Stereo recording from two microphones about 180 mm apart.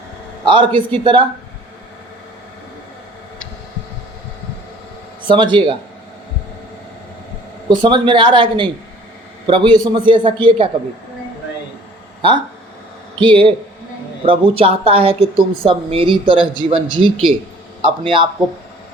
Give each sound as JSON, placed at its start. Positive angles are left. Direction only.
{"t": 0.4, "sound": "a man's voice", "side_deg": -25}
{"t": 5.3, "sound": "a man's voice", "side_deg": -25}
{"t": 7.7, "sound": "a man's voice", "side_deg": -25}
{"t": 13.1, "sound": "a man's voice", "side_deg": -30}